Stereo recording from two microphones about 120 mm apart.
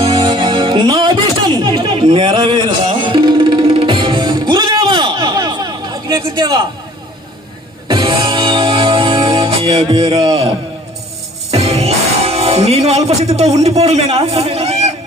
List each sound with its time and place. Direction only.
0.3 s music: 40° right (ahead or behind)
2.0 s music: 45° right (ahead or behind)
7.9 s music: 40° right (ahead or behind)
11.5 s music: 60° right (ahead or behind)
13.3 s a man's voice: 65° right (ahead or behind)